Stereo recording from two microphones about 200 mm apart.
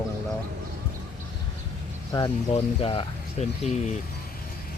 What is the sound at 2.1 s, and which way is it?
Speech, 20° left (ahead or behind).